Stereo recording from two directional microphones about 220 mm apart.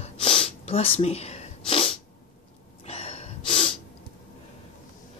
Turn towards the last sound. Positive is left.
turn(degrees=30)  # may be behind; listen again after turning